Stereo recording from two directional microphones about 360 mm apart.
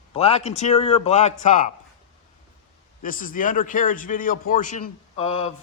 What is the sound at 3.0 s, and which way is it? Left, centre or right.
A man's voice, left.